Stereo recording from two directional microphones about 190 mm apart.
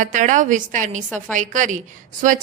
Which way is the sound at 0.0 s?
40° right (ahead or behind).